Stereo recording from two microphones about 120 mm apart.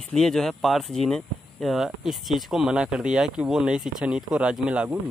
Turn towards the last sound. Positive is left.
turn(degrees=-10)  # may be behind; listen again after turning